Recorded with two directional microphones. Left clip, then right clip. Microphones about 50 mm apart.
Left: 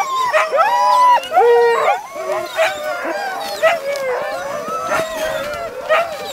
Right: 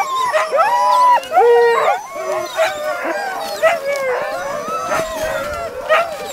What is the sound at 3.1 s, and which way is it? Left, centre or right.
Dog, right.